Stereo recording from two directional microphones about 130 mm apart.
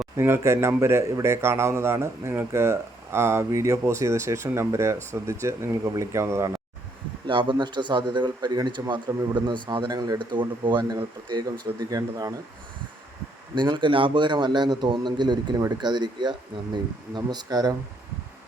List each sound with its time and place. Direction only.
0.2 s a man's voice: 20° right (ahead or behind)
7.3 s a man's voice: 40° right (ahead or behind)
13.6 s a man's voice: 35° right (ahead or behind)